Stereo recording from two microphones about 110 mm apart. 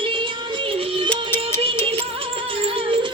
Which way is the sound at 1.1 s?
20° left (ahead or behind).